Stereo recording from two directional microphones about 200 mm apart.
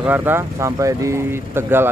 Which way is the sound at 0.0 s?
10° right (ahead or behind).